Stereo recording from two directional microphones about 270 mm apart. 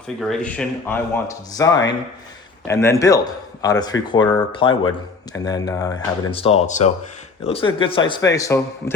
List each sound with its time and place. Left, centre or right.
0.2 s speech: centre